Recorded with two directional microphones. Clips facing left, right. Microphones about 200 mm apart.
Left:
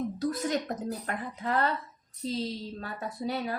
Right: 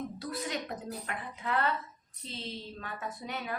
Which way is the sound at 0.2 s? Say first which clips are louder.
Left 7 dB; 45° left (ahead or behind).